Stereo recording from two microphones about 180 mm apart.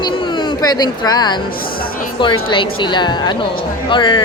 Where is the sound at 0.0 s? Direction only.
25° left (ahead or behind).